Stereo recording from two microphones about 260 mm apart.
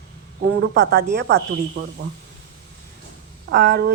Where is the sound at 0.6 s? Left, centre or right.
Right.